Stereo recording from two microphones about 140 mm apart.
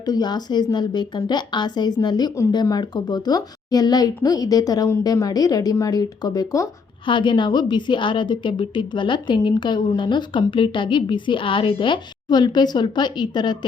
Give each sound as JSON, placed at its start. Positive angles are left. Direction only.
{"t": 0.0, "sound": "a woman's voice", "side_deg": 30}